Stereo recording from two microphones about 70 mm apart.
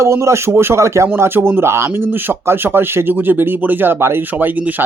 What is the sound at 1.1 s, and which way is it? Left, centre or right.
Speech, right.